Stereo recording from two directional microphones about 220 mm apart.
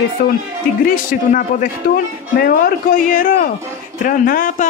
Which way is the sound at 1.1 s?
40° left (ahead or behind).